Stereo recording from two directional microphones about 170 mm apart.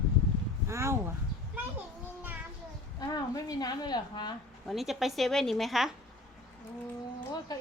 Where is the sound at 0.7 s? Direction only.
15° right (ahead or behind).